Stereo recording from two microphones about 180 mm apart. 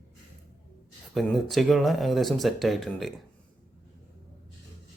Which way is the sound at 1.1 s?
Centre (ahead or behind).